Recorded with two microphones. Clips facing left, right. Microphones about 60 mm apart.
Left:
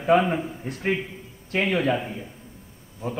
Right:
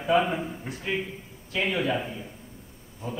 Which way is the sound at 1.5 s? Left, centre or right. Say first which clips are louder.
Left 4 dB; left.